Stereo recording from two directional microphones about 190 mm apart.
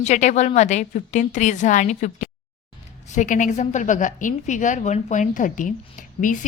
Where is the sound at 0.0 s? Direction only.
40° left (ahead or behind).